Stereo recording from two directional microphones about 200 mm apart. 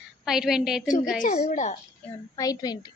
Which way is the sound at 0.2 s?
Centre (ahead or behind).